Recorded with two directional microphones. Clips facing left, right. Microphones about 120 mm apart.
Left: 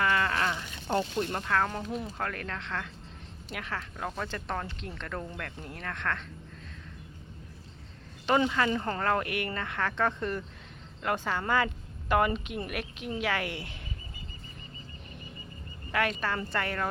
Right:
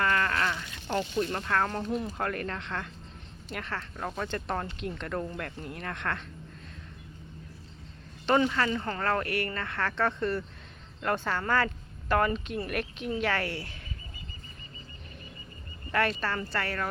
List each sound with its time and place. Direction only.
0.0 s a sound: 10° left (ahead or behind)
0.9 s speech: 20° left (ahead or behind)
1.3 s speech: 5° left (ahead or behind)
8.3 s speech: 10° left (ahead or behind)
15.9 s speech: 10° left (ahead or behind)